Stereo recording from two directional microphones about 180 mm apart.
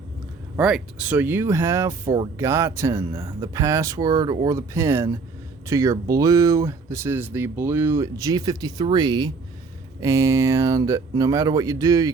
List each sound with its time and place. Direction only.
0.5 s speech: 5° right (ahead or behind)